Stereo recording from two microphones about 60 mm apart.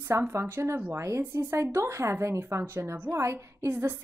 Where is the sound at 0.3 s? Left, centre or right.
Right.